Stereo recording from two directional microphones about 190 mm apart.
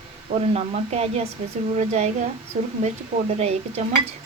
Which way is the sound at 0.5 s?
35° right (ahead or behind).